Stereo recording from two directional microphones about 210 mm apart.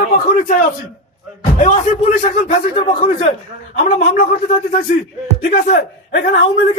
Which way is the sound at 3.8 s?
40° left (ahead or behind).